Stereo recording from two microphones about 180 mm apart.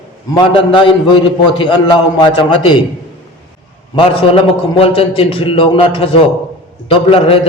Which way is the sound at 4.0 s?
30° left (ahead or behind).